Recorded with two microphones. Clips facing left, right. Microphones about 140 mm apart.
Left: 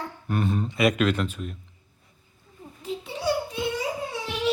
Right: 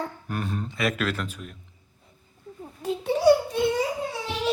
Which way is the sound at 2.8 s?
50° right (ahead or behind).